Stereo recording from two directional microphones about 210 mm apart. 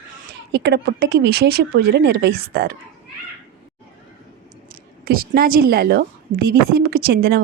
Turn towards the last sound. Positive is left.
turn(degrees=-50)  # may be behind; listen again after turning